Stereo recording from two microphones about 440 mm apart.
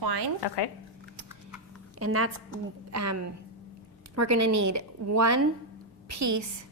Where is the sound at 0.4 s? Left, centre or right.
Left.